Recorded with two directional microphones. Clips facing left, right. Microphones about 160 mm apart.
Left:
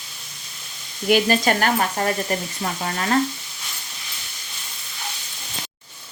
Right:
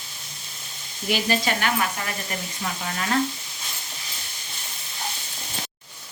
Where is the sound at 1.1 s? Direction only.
55° left (ahead or behind).